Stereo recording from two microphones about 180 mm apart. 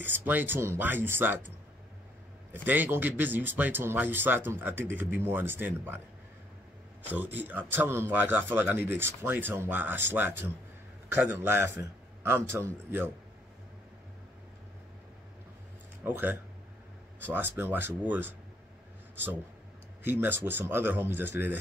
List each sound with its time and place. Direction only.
0.0 s a man's voice: 10° right (ahead or behind)
2.5 s a man's voice: 10° right (ahead or behind)
7.1 s a man's voice: 10° right (ahead or behind)
16.0 s a man's voice: 10° right (ahead or behind)
20.0 s a man's voice: 10° right (ahead or behind)